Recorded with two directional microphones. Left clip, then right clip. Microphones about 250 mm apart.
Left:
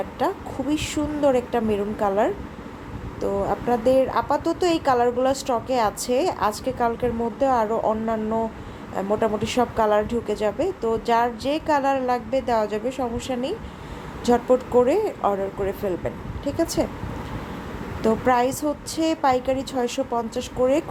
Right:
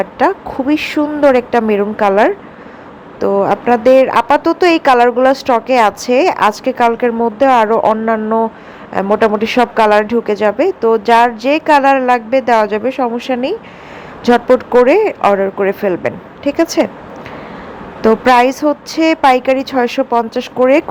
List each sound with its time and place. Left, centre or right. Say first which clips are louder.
0.2 s a woman's voice: right 11 dB; right
18.0 s a woman's voice: right 11 dB; right